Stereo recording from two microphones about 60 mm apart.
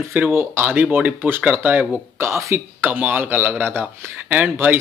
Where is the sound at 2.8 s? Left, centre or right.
Right.